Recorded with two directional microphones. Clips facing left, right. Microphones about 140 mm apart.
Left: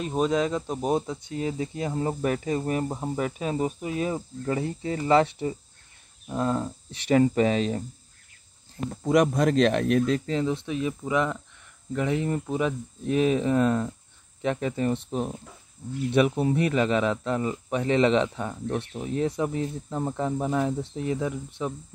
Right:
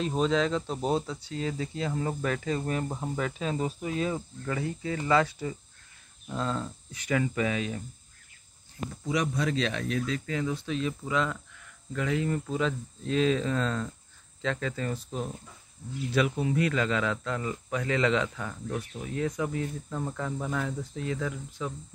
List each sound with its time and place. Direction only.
0.0 s speech: 10° left (ahead or behind)
4.1 s speech: 30° left (ahead or behind)
9.0 s speech: 55° left (ahead or behind)
10.2 s speech: 25° left (ahead or behind)